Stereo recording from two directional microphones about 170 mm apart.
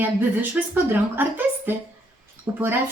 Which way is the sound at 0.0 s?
10° right (ahead or behind).